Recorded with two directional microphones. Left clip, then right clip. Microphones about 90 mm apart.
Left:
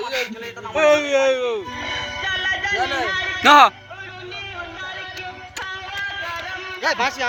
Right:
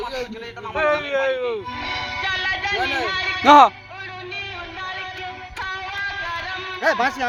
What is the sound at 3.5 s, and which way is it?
Speech, 25° right (ahead or behind).